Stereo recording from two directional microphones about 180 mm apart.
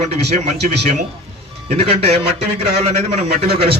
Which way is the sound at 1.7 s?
35° right (ahead or behind).